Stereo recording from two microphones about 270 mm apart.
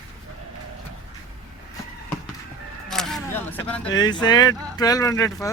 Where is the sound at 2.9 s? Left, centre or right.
Centre.